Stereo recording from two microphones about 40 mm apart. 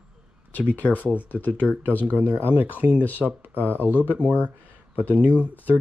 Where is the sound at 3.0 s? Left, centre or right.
Left.